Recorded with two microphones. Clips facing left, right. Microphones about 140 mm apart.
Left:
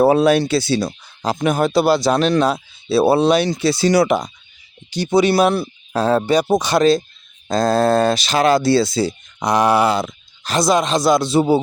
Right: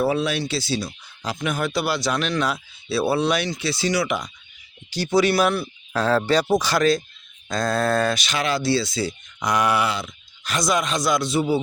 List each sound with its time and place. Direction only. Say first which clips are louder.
0.0 s speech: left 9 dB; 45° left (ahead or behind); by 0.9 s 65° left (ahead or behind)
1.0 s speech: left 8 dB; 40° left (ahead or behind)
4.9 s speech: left 4 dB; 20° left (ahead or behind)